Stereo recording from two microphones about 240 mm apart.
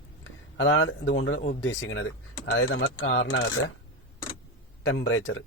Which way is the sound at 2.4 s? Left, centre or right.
Left.